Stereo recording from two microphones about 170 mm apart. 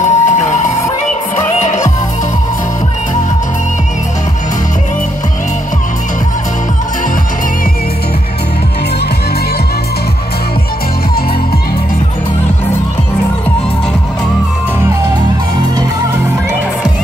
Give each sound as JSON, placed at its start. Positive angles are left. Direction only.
{"t": 0.0, "sound": "emergency vehicle", "side_deg": 45}
{"t": 1.6, "sound": "music", "side_deg": 45}